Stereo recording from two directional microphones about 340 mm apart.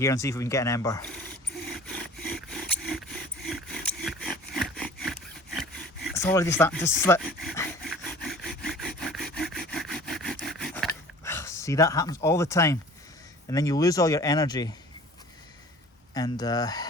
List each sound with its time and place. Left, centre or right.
0.0 s speech: centre
1.6 s a sound: centre
6.1 s rub: centre
13.5 s speech: centre
16.1 s speech: centre